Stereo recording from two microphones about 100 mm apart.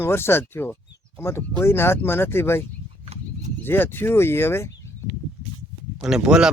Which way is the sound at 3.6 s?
20° left (ahead or behind).